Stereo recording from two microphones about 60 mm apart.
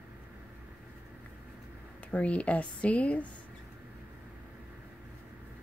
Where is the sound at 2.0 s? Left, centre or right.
Left.